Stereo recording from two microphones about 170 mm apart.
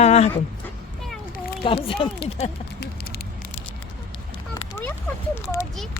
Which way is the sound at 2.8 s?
65° left (ahead or behind).